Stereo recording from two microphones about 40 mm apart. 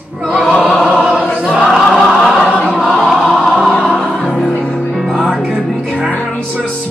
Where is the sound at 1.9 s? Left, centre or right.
Centre.